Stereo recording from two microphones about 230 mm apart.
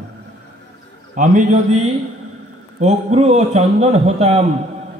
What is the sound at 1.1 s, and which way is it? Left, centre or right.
Speech, right.